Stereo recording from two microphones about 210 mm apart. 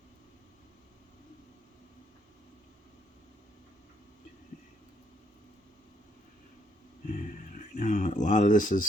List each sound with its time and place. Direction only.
7.1 s speech: 35° left (ahead or behind)